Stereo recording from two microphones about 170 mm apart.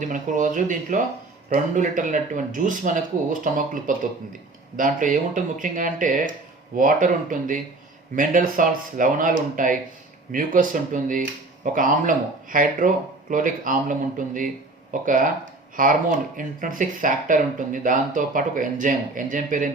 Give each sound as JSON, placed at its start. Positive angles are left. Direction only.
{"t": 0.0, "sound": "speech", "side_deg": -50}
{"t": 15.0, "sound": "speech", "side_deg": -50}